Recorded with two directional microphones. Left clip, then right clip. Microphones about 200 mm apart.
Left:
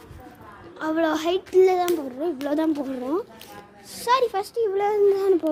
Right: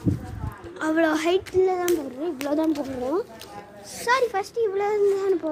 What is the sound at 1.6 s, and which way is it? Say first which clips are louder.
A child's voice: left 7 dB; 55° left (ahead or behind).